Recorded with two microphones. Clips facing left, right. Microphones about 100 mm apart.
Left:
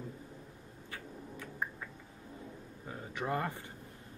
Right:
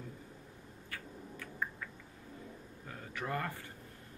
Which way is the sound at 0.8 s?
20° left (ahead or behind).